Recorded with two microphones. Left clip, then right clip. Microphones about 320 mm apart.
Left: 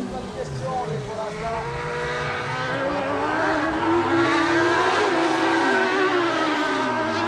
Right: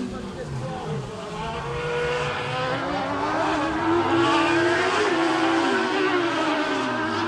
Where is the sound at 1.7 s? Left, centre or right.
Centre.